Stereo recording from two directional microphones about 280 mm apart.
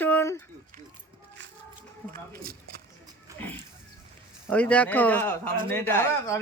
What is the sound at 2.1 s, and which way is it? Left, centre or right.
Speech, right.